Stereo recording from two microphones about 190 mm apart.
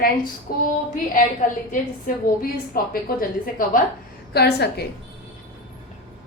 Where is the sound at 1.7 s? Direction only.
45° left (ahead or behind).